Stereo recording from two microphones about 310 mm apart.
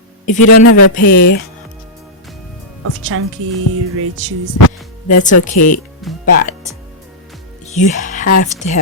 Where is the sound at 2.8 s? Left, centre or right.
Right.